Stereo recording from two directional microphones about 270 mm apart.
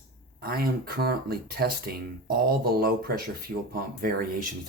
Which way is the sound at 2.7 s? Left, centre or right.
Right.